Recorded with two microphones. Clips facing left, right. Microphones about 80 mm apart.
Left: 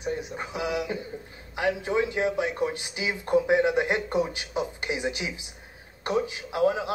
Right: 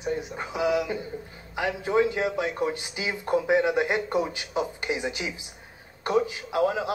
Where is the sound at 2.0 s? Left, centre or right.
Left.